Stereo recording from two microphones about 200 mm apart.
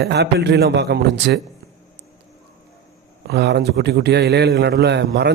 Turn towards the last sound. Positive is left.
turn(degrees=-60)  # may be behind; listen again after turning